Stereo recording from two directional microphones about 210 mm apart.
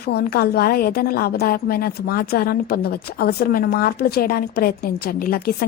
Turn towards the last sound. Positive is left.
turn(degrees=45)  # may be behind; listen again after turning